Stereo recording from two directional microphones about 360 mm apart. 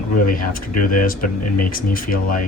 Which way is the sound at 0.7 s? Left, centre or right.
Left.